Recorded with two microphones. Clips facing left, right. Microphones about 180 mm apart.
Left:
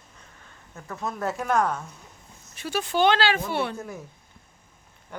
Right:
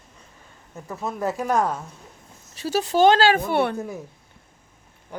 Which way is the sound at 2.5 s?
35° right (ahead or behind).